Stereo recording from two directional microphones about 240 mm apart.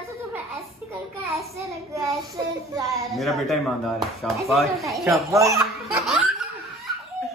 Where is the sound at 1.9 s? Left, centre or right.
Centre.